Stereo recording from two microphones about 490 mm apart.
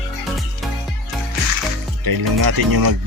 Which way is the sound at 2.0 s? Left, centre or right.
Right.